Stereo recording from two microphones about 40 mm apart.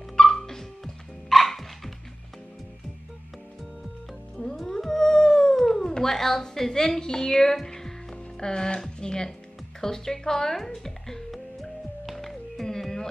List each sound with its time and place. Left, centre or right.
0.2 s dog: centre
1.3 s music: centre
4.6 s howl: centre
5.9 s a woman's voice: centre
12.1 s music: centre